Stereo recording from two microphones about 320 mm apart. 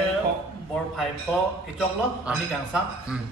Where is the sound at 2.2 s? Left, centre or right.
Centre.